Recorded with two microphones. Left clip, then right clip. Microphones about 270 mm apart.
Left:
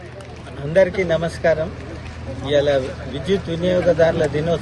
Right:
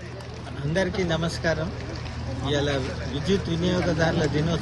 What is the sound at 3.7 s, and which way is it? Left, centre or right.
Speech, centre.